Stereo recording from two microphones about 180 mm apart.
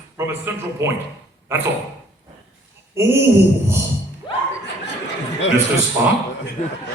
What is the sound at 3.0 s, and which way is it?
Speech, 15° right (ahead or behind).